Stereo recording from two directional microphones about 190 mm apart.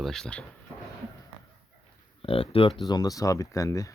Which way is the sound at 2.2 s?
30° left (ahead or behind).